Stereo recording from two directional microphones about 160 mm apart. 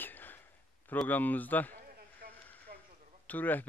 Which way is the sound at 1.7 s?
65° right (ahead or behind).